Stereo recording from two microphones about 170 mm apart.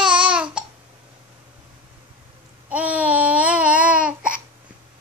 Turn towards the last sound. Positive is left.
turn(degrees=-5)  # may be behind; listen again after turning